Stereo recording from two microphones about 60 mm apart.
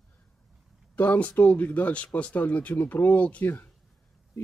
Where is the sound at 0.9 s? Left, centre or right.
Left.